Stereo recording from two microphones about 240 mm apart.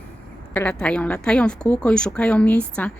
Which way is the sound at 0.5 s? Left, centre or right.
Centre.